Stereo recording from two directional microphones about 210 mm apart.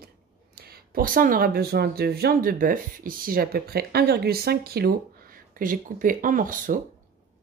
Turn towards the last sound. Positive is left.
turn(degrees=-40)  # may be behind; listen again after turning